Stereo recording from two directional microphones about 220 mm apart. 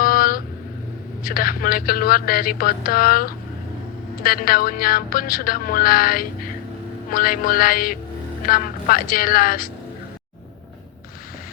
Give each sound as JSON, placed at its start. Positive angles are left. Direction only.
{"t": 0.0, "sound": "vehicle", "side_deg": 40}
{"t": 1.2, "sound": "a woman's voice", "side_deg": 40}